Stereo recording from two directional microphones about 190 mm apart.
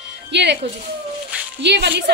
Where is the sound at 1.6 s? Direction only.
65° right (ahead or behind).